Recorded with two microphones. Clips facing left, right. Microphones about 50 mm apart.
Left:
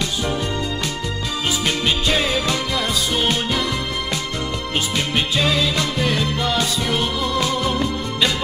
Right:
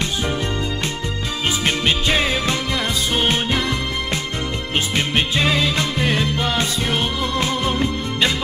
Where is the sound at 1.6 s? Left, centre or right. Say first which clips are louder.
Right 2 dB; right.